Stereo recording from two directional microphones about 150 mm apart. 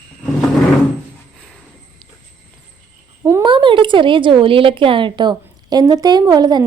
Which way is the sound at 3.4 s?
35° right (ahead or behind).